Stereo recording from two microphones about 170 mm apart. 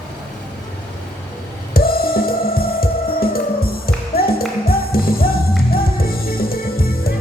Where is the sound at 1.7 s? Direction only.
60° left (ahead or behind).